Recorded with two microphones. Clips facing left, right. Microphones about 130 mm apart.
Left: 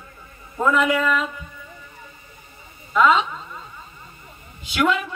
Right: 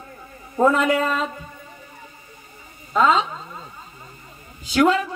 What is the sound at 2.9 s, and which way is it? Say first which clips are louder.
Speech: left 1 dB; 35° right (ahead or behind).